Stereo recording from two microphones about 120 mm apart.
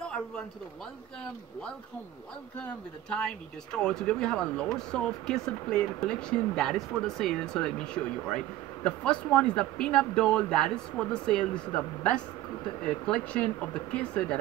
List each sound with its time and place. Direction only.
2.6 s speech: 10° left (ahead or behind)